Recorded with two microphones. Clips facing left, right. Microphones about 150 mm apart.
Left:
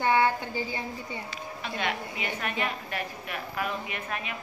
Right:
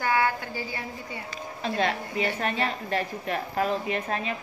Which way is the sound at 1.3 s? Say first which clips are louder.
Right 5 dB; 35° right (ahead or behind).